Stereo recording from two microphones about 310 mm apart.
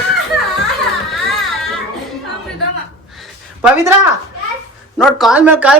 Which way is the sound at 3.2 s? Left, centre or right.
Centre.